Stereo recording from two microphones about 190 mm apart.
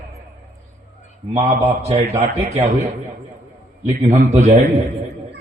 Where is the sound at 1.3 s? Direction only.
35° right (ahead or behind).